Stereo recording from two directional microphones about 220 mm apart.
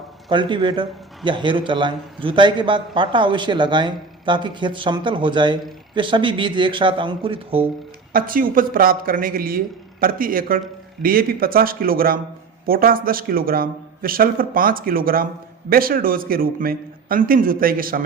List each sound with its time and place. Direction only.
0.3 s a man's voice: 20° right (ahead or behind)
8.1 s a man's voice: 40° right (ahead or behind)